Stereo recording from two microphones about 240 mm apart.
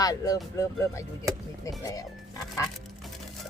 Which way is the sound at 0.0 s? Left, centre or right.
Centre.